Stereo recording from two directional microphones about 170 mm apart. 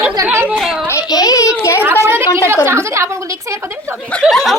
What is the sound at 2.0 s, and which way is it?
A woman's voice, 15° right (ahead or behind).